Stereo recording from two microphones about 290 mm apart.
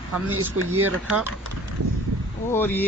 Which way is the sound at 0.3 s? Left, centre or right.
Right.